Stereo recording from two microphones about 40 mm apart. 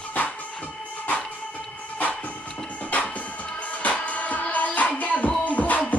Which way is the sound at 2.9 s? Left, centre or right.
Left.